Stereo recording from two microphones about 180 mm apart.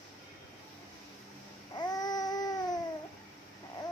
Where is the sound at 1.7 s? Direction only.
20° left (ahead or behind).